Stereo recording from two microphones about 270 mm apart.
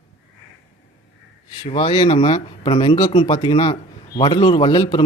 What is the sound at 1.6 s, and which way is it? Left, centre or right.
Speech, centre.